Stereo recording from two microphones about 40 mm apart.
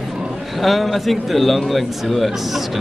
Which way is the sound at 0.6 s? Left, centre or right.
Centre.